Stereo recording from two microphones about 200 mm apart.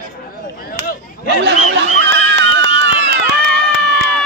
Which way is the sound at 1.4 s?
60° right (ahead or behind).